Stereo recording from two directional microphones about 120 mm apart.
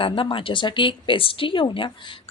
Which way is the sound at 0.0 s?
45° left (ahead or behind).